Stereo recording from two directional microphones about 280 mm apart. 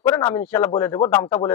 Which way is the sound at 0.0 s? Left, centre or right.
Centre.